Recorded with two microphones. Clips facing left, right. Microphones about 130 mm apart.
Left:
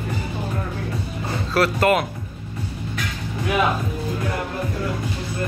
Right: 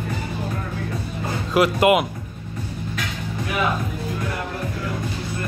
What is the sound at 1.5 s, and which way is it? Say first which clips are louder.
Speech: right 2 dB; 15° right (ahead or behind).